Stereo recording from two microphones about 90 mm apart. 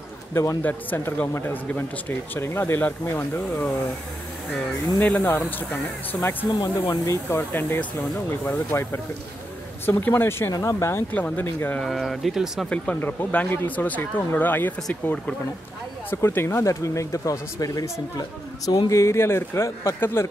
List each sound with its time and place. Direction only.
0.3 s a man's voice: 35° left (ahead or behind)
0.6 s speech: 20° left (ahead or behind)
5.0 s speech: 15° left (ahead or behind)
6.2 s speech: 35° left (ahead or behind)
11.8 s speech: centre (ahead or behind)
12.6 s speech: 15° left (ahead or behind); by 20.2 s 30° left (ahead or behind)